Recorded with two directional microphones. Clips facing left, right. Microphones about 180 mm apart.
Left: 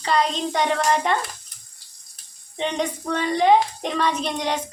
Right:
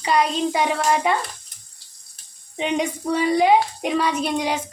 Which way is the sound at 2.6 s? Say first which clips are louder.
Right 2 dB; 10° right (ahead or behind).